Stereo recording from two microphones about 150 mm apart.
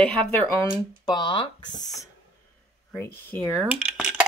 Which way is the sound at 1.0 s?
30° left (ahead or behind).